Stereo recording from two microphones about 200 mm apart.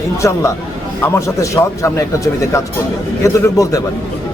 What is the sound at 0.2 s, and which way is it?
A man's voice, 15° left (ahead or behind).